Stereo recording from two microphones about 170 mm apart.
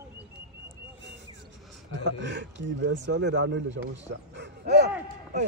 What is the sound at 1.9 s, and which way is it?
Speech, 90° right.